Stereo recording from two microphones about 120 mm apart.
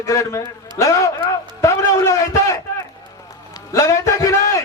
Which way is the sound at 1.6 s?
25° left (ahead or behind).